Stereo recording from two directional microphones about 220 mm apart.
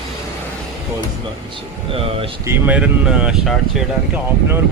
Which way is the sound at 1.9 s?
25° right (ahead or behind).